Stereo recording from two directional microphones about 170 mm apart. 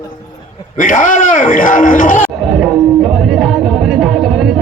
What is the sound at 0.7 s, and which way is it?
A man's voice, 50° left (ahead or behind).